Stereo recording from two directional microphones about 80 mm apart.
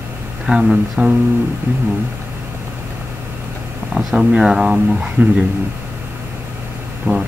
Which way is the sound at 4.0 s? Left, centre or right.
Centre.